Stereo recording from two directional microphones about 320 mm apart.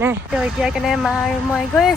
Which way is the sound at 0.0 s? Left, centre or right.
Centre.